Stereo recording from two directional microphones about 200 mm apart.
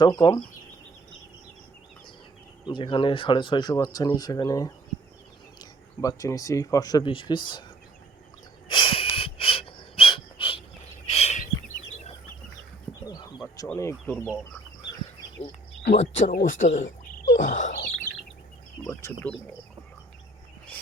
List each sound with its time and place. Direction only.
0.0 s speech: 20° left (ahead or behind)
2.6 s speech: 25° left (ahead or behind)
8.6 s wheeze: 25° left (ahead or behind)
11.1 s a sound: 35° left (ahead or behind)
13.7 s speech: 15° left (ahead or behind)
16.0 s speech: 35° left (ahead or behind)
18.9 s speech: 10° left (ahead or behind)